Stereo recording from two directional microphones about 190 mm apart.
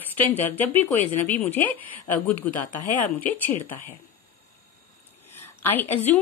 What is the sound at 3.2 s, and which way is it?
Speech, 10° left (ahead or behind).